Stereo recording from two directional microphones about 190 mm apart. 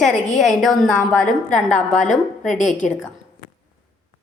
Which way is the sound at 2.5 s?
40° left (ahead or behind).